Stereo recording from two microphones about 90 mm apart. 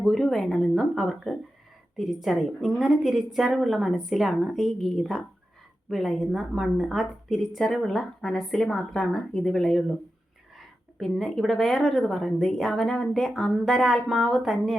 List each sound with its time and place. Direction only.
0.0 s a woman's voice: centre (ahead or behind)
11.0 s a woman's voice: centre (ahead or behind)